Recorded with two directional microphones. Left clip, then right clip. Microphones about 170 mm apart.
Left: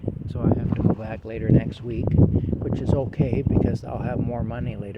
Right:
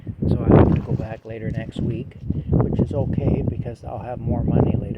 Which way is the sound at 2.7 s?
40° left (ahead or behind).